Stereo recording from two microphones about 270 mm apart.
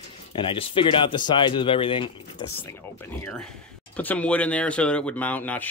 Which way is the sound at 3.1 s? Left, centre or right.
Centre.